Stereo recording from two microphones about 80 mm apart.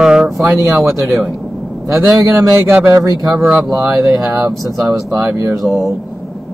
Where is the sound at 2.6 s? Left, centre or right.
Right.